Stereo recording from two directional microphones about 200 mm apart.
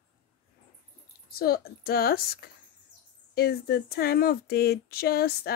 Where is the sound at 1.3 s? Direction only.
50° left (ahead or behind).